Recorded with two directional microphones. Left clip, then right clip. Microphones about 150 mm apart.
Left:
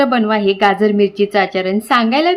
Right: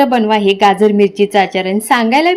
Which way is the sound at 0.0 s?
10° right (ahead or behind).